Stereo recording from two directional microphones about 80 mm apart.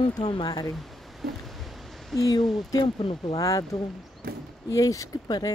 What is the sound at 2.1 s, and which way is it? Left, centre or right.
A woman's voice, left.